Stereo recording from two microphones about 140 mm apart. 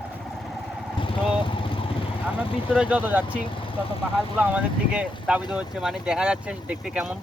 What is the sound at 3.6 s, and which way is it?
Speech, 40° left (ahead or behind).